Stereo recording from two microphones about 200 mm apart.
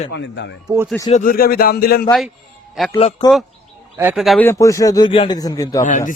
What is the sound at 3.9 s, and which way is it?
Speech, 5° right (ahead or behind).